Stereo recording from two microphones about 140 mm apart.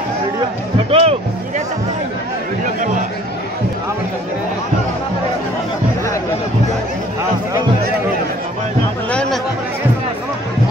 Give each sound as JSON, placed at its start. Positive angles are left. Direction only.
{"t": 0.8, "sound": "speech", "side_deg": -45}